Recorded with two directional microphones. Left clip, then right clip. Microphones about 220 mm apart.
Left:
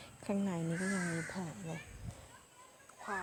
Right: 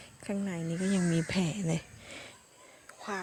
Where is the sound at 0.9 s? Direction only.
40° right (ahead or behind).